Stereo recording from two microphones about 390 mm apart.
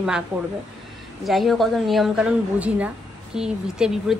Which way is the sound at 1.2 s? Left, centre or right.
Centre.